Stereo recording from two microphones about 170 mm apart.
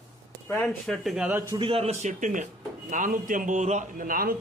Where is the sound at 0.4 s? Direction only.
10° left (ahead or behind).